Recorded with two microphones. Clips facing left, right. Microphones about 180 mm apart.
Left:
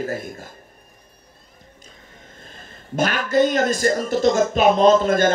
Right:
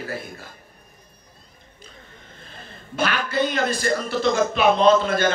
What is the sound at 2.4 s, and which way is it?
A man's voice, 45° left (ahead or behind).